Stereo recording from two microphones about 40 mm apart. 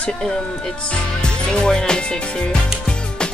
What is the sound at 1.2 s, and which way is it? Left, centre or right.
Speech, left.